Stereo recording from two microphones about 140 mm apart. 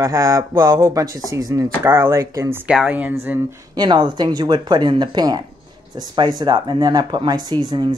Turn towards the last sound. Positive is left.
turn(degrees=-30)  # may be behind; listen again after turning